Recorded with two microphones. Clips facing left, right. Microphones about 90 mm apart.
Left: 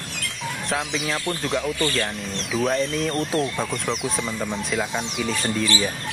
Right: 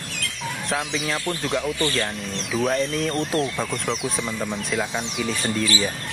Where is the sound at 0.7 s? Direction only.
Centre (ahead or behind).